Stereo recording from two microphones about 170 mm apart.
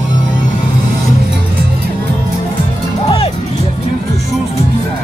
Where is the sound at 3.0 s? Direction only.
35° left (ahead or behind).